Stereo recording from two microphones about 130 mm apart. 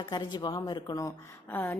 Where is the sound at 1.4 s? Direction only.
15° left (ahead or behind).